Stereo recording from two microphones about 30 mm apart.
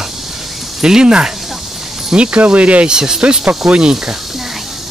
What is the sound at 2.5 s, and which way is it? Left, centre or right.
Speech, right.